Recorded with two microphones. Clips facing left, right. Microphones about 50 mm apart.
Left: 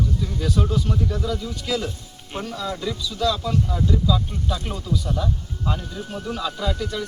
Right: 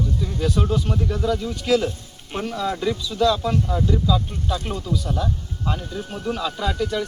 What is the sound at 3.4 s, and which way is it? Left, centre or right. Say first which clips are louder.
Speech: right 2 dB; right.